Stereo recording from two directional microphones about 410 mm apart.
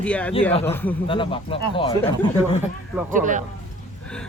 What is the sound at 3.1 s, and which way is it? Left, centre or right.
Speech, centre.